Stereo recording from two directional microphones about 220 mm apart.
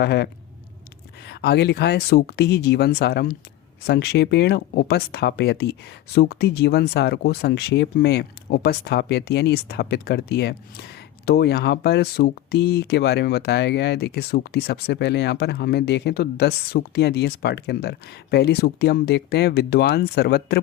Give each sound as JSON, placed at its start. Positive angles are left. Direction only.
{"t": 0.0, "sound": "speech", "side_deg": 45}